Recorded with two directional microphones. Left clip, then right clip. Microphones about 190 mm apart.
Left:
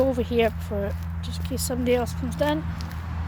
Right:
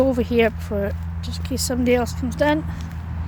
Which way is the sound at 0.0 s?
30° right (ahead or behind).